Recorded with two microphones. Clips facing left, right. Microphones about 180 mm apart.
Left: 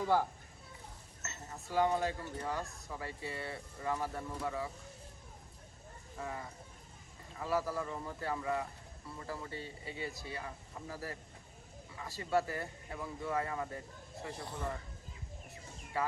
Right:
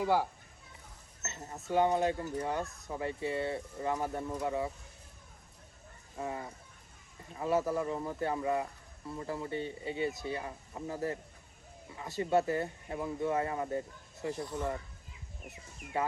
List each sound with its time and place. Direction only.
0.0 s speech: 10° right (ahead or behind)
1.2 s speech: 25° right (ahead or behind)
6.1 s speech: 25° right (ahead or behind)
15.4 s a sound: 20° right (ahead or behind)